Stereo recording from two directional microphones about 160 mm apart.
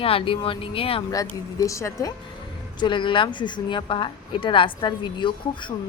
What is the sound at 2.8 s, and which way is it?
A woman's voice, 30° left (ahead or behind).